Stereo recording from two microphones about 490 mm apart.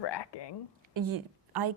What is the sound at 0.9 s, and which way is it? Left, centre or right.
Speech, right.